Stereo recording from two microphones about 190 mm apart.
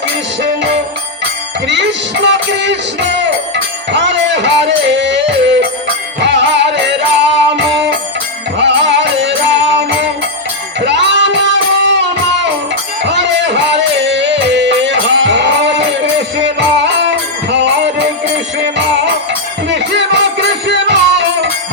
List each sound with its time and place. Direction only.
0.4 s music: 65° right (ahead or behind)
13.1 s music: 70° right (ahead or behind)
19.6 s music: 70° right (ahead or behind)